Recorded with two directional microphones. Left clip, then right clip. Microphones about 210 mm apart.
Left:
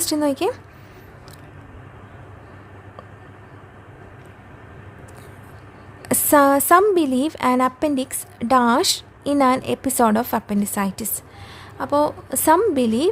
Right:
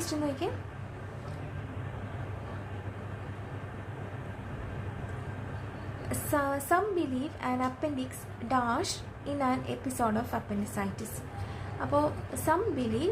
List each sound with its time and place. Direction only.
0.1 s a woman's voice: 50° left (ahead or behind)
6.1 s a woman's voice: 50° left (ahead or behind)